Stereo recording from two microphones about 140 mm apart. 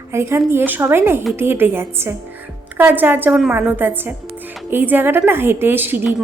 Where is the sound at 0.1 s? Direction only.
20° right (ahead or behind).